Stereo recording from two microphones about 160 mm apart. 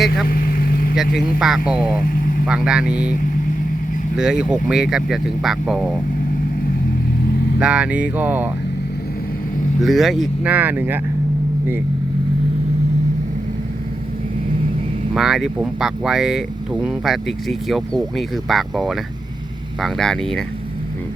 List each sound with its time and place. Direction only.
0.3 s vehicle: 65° left (ahead or behind)
0.9 s speech: centre (ahead or behind)
4.2 s speech: 5° right (ahead or behind)
7.6 s speech: 5° right (ahead or behind)
9.8 s speech: centre (ahead or behind)
15.1 s speech: centre (ahead or behind)